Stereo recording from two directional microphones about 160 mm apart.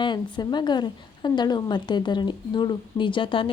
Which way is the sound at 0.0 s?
30° left (ahead or behind).